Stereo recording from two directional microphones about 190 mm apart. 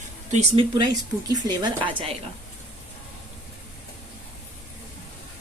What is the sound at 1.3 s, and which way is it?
Speech, 20° right (ahead or behind).